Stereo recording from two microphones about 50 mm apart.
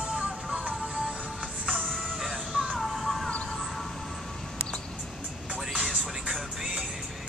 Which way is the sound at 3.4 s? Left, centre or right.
Centre.